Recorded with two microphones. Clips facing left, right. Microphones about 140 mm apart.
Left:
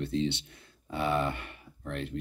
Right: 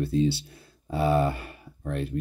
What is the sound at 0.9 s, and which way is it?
Speech, 30° right (ahead or behind).